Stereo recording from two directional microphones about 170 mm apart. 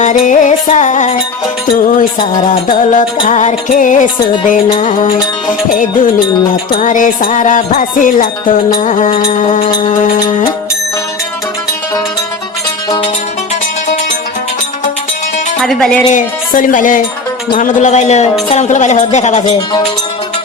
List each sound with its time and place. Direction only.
0.0 s a man's voice: 45° left (ahead or behind)
6.7 s a man's voice: 50° left (ahead or behind)
15.6 s music: 5° left (ahead or behind)
16.1 s a man's voice: 50° left (ahead or behind)